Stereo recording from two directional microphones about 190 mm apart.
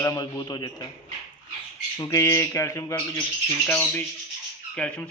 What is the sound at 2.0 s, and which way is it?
A man's voice, 15° left (ahead or behind).